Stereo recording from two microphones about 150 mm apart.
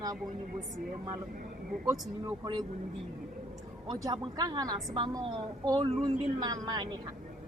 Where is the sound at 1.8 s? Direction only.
25° right (ahead or behind).